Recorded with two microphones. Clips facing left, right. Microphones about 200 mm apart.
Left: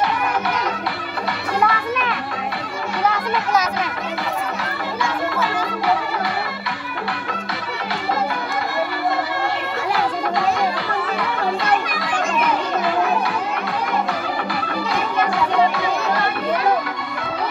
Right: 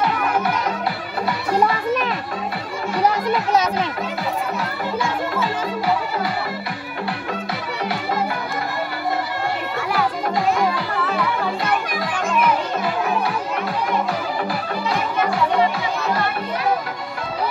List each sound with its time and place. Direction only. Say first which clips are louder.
1.5 s children playing: right 2 dB; 40° right (ahead or behind)